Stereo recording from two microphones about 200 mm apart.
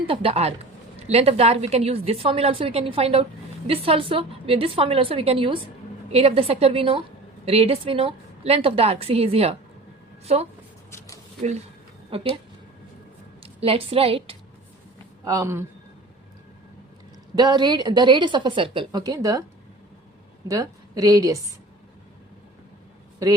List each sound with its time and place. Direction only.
0.1 s a woman's voice: 30° right (ahead or behind)
10.9 s a sound: 15° left (ahead or behind)
12.1 s a woman's voice: 30° right (ahead or behind)
13.4 s a sound: 30° right (ahead or behind)
15.2 s speech: 15° right (ahead or behind)
17.3 s a woman's voice: 20° right (ahead or behind)
20.5 s a woman's voice: 15° right (ahead or behind)
23.2 s a man's voice: 15° right (ahead or behind)